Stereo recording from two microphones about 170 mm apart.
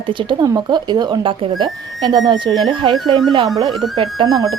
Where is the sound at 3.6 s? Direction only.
20° right (ahead or behind).